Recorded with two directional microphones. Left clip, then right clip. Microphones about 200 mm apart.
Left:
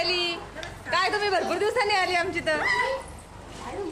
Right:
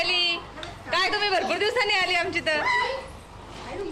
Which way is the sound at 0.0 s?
5° left (ahead or behind).